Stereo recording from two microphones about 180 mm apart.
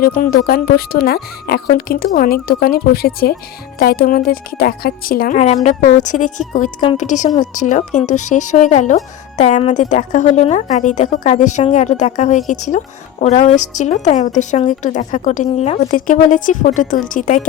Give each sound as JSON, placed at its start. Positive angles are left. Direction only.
{"t": 0.0, "sound": "a woman's voice", "side_deg": 55}
{"t": 16.0, "sound": "a woman's voice", "side_deg": 50}